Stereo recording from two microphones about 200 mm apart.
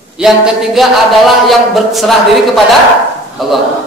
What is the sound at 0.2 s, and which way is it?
A man's voice, centre (ahead or behind).